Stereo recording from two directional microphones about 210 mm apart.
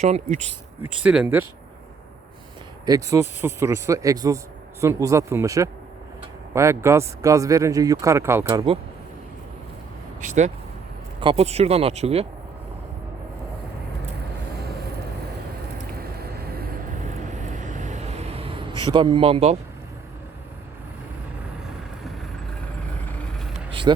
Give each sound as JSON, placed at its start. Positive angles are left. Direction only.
{"t": 0.0, "sound": "speech", "side_deg": -35}
{"t": 1.0, "sound": "speech", "side_deg": -5}
{"t": 2.8, "sound": "speech", "side_deg": -15}
{"t": 10.2, "sound": "speech", "side_deg": -35}
{"t": 17.5, "sound": "a sound", "side_deg": -35}